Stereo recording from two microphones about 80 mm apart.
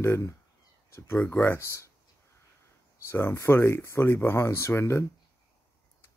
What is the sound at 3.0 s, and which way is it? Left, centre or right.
Speech, left.